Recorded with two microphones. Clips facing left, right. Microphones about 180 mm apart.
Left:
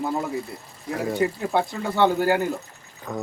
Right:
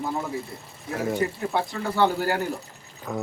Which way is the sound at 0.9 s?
Centre (ahead or behind).